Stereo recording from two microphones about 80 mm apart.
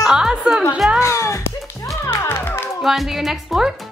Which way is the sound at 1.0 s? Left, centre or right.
Left.